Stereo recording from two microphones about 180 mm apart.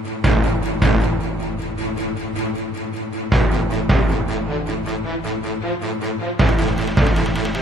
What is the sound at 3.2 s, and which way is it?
Music, centre (ahead or behind).